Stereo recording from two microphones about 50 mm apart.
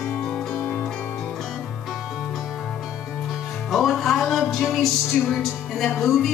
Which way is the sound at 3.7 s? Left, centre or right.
Centre.